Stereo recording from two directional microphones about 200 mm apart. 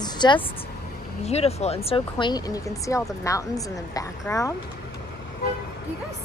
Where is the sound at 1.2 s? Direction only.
30° left (ahead or behind); by 4.5 s 15° left (ahead or behind).